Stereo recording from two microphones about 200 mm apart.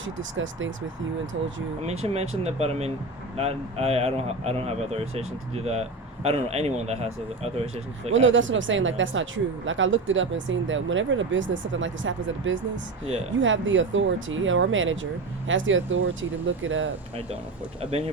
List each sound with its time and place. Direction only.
0.0 s speech: 75° right (ahead or behind)
1.9 s a man's voice: 30° right (ahead or behind)
8.1 s speech: 70° right (ahead or behind)